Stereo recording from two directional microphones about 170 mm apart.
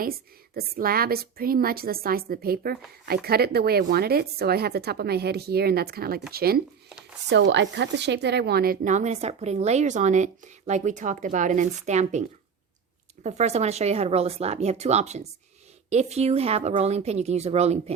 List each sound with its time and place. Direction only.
0.5 s a woman's voice: 60° right (ahead or behind)
7.3 s a woman's voice: 90° right; by 12.2 s 45° right (ahead or behind)
13.2 s speech: 40° right (ahead or behind)